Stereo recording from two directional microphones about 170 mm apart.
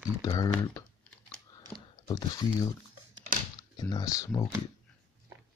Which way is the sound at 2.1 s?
25° left (ahead or behind).